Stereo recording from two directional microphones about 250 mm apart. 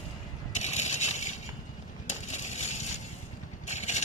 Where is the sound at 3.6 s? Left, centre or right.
Left.